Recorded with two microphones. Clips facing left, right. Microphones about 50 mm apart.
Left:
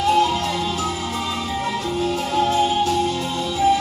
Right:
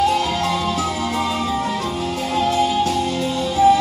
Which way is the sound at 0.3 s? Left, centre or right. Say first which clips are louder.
Right 2 dB; right.